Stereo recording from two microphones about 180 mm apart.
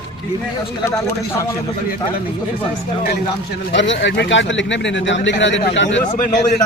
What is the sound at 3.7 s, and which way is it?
Speech, 80° left.